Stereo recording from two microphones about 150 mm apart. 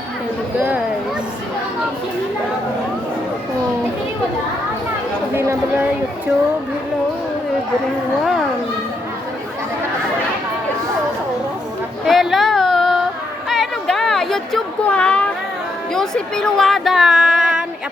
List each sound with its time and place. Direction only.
5.3 s speech: 15° right (ahead or behind)
8.2 s speech: centre (ahead or behind)
12.0 s a sound: centre (ahead or behind)
15.9 s speech: 5° left (ahead or behind)